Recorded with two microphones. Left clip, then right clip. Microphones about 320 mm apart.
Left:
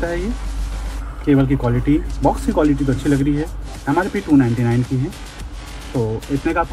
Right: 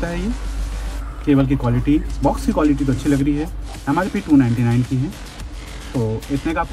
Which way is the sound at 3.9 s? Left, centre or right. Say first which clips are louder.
Left 1 dB; centre.